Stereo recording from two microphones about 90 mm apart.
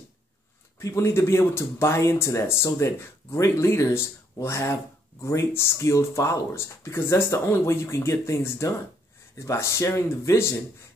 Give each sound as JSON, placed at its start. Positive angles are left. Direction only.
{"t": 0.7, "sound": "speech", "side_deg": 35}